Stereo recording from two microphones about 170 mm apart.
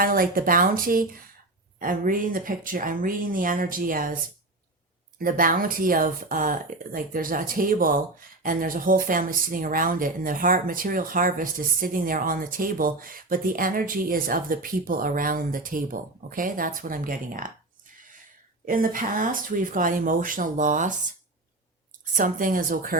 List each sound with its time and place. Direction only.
0.0 s speech: 55° right (ahead or behind)
5.2 s speech: 55° right (ahead or behind)
18.6 s speech: 55° right (ahead or behind)
22.1 s speech: 50° right (ahead or behind)